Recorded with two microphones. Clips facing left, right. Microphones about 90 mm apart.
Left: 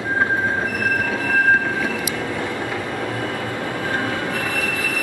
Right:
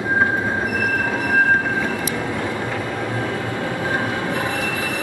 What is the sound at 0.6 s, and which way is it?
Train, 20° right (ahead or behind).